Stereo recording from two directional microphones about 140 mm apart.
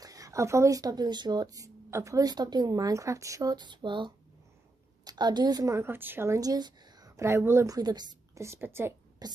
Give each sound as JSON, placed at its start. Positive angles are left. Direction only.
{"t": 0.0, "sound": "a woman's voice", "side_deg": -25}
{"t": 8.5, "sound": "a woman's voice", "side_deg": -15}
{"t": 9.2, "sound": "speech", "side_deg": -30}